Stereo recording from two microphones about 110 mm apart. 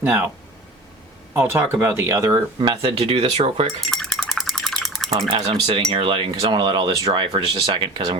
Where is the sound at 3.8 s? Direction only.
5° left (ahead or behind).